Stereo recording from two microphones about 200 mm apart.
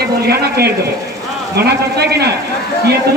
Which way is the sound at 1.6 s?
55° right (ahead or behind).